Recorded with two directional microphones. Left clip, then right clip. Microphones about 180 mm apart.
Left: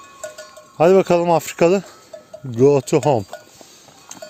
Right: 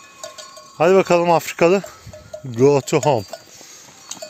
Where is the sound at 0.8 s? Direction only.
35° left (ahead or behind).